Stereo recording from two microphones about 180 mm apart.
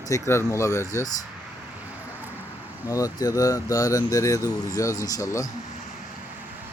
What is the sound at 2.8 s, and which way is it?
Speech, 20° left (ahead or behind).